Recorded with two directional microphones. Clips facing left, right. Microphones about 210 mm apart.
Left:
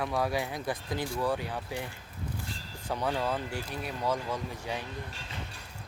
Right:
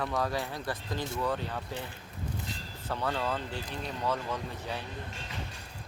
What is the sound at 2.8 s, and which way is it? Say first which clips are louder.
Speech: left 2 dB; 15° left (ahead or behind).